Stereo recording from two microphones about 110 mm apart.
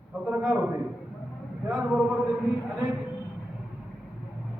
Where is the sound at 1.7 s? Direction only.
5° right (ahead or behind).